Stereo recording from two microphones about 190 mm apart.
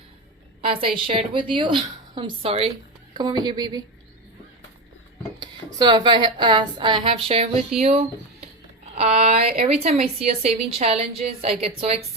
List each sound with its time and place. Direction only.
0.6 s a woman's voice: 30° right (ahead or behind)
5.4 s a woman's voice: 25° right (ahead or behind)